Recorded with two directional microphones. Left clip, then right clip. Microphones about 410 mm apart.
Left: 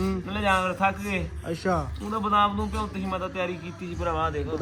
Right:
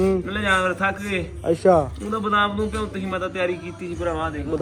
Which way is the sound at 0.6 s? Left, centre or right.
Left.